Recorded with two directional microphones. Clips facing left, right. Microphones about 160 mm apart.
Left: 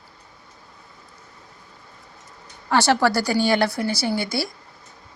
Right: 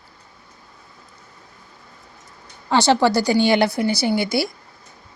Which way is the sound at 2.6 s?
15° right (ahead or behind).